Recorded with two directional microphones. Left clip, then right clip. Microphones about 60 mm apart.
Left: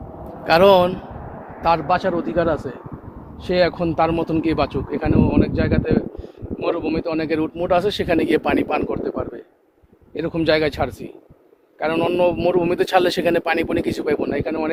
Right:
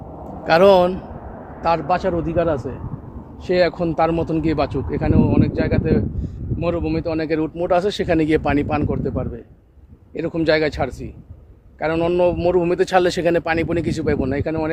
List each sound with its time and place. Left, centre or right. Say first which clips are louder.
0.4 s speech: even; centre
3.4 s speech: right 1 dB; right
12.8 s speech: left 1 dB; centre